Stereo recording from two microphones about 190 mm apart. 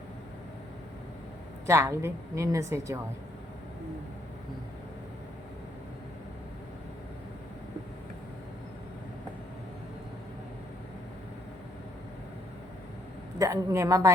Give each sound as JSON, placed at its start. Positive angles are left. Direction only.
{"t": 1.6, "sound": "a woman's voice", "side_deg": -15}
{"t": 13.4, "sound": "a woman's voice", "side_deg": -15}